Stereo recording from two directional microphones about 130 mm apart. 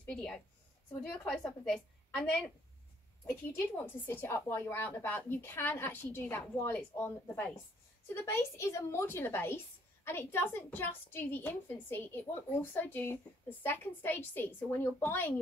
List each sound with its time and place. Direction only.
0.0 s a woman's voice: 5° left (ahead or behind)
3.7 s a woman's voice: 15° left (ahead or behind)